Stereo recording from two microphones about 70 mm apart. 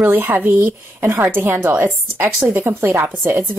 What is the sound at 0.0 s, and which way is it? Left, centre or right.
A woman's voice, right.